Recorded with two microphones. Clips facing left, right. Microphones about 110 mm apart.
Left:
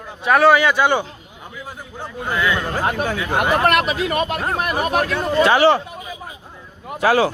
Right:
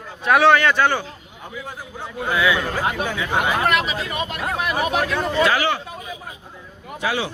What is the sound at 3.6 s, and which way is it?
Speech, 55° left (ahead or behind).